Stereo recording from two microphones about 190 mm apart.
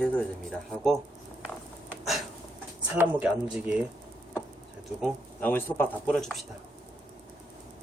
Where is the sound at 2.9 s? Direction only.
10° right (ahead or behind).